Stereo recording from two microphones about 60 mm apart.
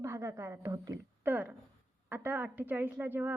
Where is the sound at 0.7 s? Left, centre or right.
Right.